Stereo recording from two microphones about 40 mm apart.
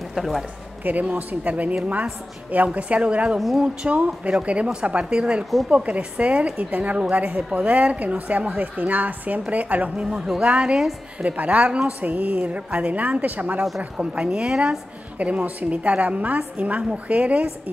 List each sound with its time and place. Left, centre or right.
0.1 s a man's voice: centre
1.1 s a woman's voice: right
3.3 s speech: centre
3.6 s a woman's voice: right
7.4 s a woman's voice: centre
7.7 s a woman's voice: right
10.0 s speech: centre
10.4 s a woman's voice: right
11.1 s a woman's voice: right
12.0 s a woman's voice: right
13.7 s a woman's voice: right
15.1 s a woman's voice: right